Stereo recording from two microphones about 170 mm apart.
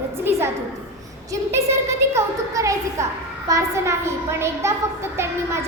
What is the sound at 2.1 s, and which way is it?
A woman's voice, 20° right (ahead or behind).